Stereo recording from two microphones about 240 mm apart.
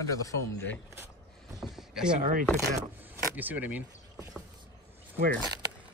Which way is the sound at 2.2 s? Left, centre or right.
Right.